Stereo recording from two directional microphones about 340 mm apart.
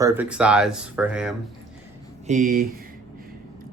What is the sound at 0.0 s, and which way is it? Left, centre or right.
Speech, centre.